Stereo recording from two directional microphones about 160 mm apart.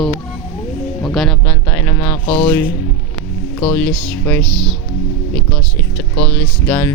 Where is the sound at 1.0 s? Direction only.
Centre (ahead or behind).